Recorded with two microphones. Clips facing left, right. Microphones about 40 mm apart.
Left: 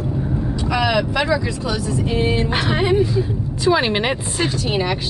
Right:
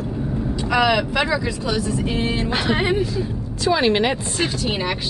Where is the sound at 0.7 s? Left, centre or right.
Centre.